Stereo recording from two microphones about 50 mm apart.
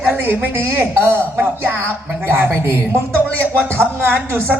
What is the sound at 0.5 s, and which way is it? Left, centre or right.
A man's voice, right.